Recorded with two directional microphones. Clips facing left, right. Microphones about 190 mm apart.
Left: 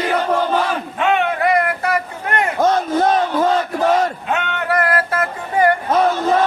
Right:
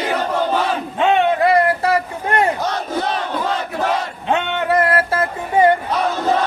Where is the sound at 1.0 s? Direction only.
25° right (ahead or behind).